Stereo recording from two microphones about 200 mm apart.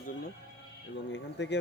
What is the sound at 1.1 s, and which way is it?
Speech, 60° left (ahead or behind).